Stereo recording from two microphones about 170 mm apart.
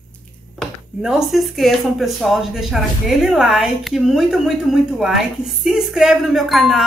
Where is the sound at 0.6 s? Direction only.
Centre (ahead or behind).